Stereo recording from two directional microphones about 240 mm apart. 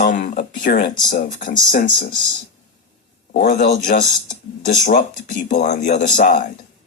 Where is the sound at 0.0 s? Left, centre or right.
Left.